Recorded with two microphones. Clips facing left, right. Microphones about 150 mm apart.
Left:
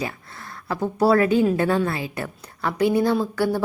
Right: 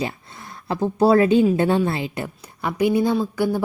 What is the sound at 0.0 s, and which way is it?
A woman's voice, 20° right (ahead or behind).